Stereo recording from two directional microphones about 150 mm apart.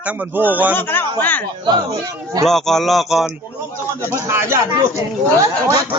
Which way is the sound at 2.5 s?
Centre (ahead or behind).